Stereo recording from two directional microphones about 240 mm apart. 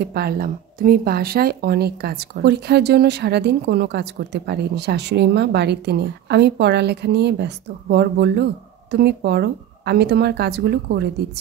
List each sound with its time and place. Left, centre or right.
0.0 s speech: right